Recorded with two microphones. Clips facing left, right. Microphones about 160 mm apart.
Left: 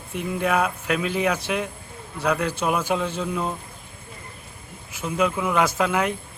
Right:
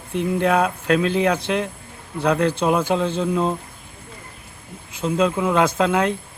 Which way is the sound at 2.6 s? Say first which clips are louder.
Right 4 dB; 25° right (ahead or behind).